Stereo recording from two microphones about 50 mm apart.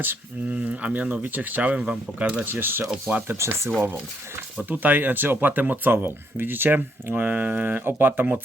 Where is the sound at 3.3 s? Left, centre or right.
Right.